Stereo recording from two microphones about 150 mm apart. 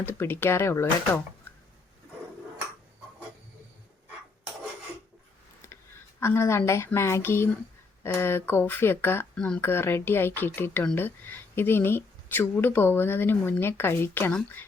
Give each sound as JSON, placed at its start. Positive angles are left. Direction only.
{"t": 0.0, "sound": "speech", "side_deg": 15}
{"t": 5.6, "sound": "a sound", "side_deg": 20}
{"t": 6.1, "sound": "speech", "side_deg": 20}